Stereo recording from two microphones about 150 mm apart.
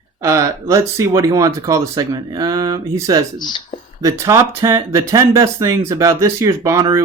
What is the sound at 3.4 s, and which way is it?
Speech, 30° left (ahead or behind).